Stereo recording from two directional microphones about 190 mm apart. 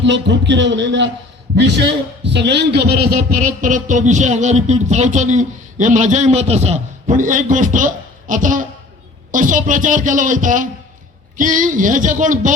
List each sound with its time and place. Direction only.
0.0 s a man's voice: 70° right (ahead or behind); by 12.5 s 40° right (ahead or behind)